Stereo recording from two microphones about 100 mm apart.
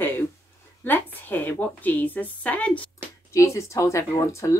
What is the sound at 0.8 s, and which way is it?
A woman's voice, 20° left (ahead or behind).